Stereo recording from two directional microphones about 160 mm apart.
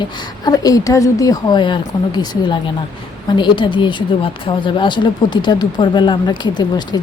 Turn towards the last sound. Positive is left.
turn(degrees=25)  # may be behind; listen again after turning